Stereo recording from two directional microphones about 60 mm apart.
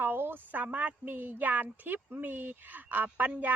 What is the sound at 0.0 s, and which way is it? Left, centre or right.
A woman's voice, right.